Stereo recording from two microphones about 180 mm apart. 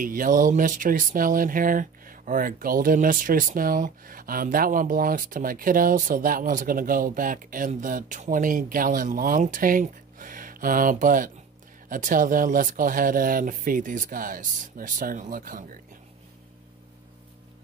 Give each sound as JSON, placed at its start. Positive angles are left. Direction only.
{"t": 0.0, "sound": "speech", "side_deg": -50}